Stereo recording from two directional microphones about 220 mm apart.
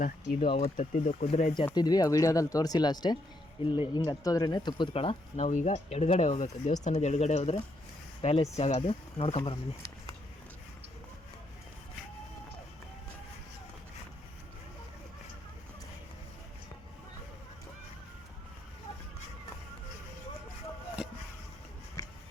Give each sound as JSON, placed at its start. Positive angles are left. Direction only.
{"t": 0.0, "sound": "speech", "side_deg": 35}
{"t": 0.4, "sound": "speech", "side_deg": 25}
{"t": 1.6, "sound": "speech", "side_deg": 20}